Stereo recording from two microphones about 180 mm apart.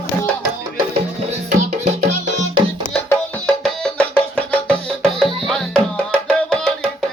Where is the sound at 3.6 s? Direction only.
5° left (ahead or behind).